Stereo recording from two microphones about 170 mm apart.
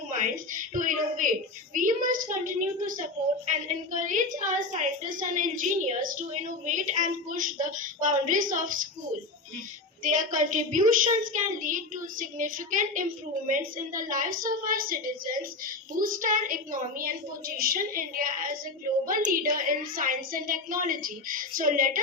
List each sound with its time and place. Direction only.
0.1 s a woman's voice: 50° right (ahead or behind)
10.0 s a woman's voice: 50° right (ahead or behind)